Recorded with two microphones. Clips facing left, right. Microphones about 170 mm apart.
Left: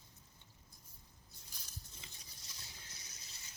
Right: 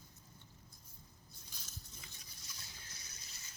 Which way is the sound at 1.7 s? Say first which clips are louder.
Left 1 dB; 30° left (ahead or behind).